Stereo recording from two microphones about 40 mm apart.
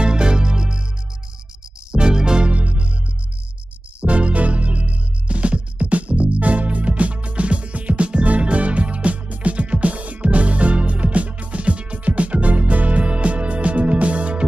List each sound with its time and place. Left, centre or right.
0.0 s music: right
1.9 s music: right
2.5 s music: right
4.0 s music: right